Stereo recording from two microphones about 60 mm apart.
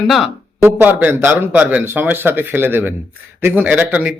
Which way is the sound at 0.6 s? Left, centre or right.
Right.